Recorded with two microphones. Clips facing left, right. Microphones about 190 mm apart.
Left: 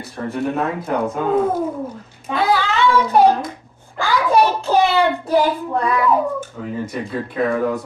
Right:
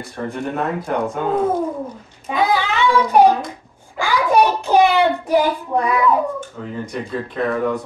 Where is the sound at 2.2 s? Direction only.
15° right (ahead or behind).